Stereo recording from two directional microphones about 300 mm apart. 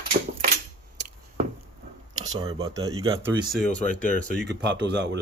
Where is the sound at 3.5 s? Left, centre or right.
Centre.